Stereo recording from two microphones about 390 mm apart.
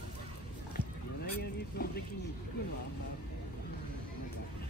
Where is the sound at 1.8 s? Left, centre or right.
Left.